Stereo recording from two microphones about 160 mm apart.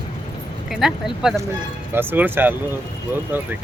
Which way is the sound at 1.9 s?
10° right (ahead or behind).